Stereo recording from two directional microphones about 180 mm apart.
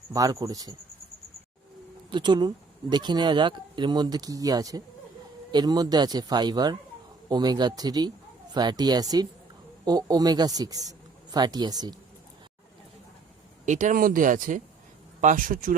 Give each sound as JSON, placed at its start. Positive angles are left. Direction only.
{"t": 0.1, "sound": "speech", "side_deg": -20}
{"t": 2.0, "sound": "speech", "side_deg": -25}
{"t": 13.7, "sound": "speech", "side_deg": -45}